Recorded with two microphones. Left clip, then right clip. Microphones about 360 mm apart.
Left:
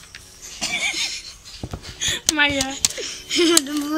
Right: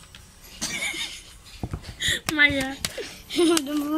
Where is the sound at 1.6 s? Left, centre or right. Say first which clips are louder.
Left 1 dB; centre.